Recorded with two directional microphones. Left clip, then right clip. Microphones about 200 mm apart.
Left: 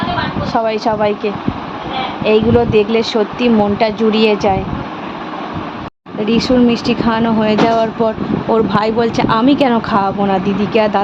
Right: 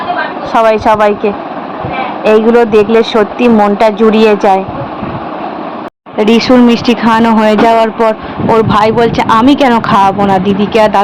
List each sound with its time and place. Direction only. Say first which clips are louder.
0.6 s speech: right 9 dB; 15° right (ahead or behind)
6.2 s speech: right 6 dB; 25° right (ahead or behind)